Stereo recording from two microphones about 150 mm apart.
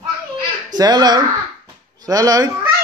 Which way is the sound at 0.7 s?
25° right (ahead or behind).